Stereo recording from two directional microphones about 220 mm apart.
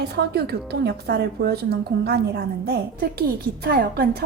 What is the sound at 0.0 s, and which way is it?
A woman's voice, 45° right (ahead or behind).